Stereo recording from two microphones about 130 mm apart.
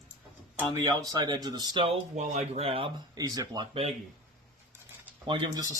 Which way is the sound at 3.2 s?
30° right (ahead or behind).